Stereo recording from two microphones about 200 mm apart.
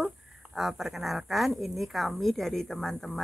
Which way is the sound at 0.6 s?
Centre (ahead or behind).